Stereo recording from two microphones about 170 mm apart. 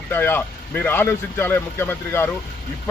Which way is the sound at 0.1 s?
15° left (ahead or behind).